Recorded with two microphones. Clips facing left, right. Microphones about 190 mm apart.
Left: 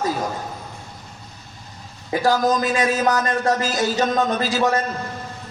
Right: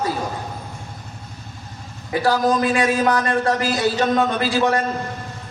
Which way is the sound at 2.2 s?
40° left (ahead or behind).